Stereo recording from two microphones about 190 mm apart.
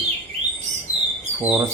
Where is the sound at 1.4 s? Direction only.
10° right (ahead or behind).